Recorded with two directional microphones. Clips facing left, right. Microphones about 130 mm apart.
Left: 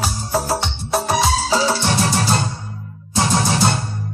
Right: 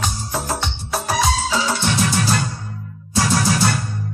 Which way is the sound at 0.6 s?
Centre (ahead or behind).